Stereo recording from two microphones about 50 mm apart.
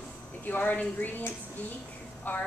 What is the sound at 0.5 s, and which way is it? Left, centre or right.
Speech, left.